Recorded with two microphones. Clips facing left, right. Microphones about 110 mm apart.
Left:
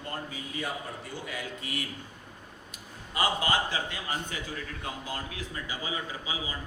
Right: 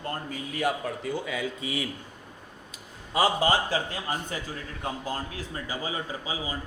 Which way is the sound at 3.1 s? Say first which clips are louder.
Right 5 dB; 35° right (ahead or behind).